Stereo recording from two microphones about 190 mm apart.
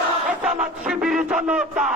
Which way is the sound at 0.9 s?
5° right (ahead or behind).